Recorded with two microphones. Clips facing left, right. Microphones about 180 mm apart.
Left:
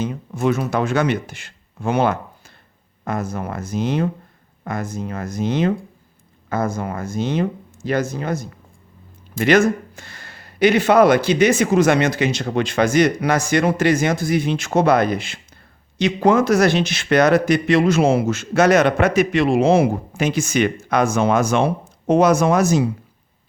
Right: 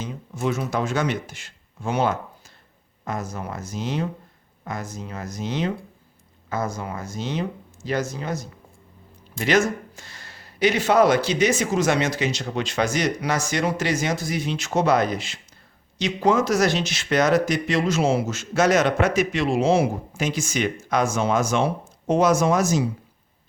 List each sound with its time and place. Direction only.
0.0 s speech: 60° left (ahead or behind)